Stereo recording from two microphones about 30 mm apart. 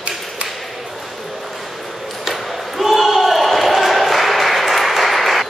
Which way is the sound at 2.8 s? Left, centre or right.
Centre.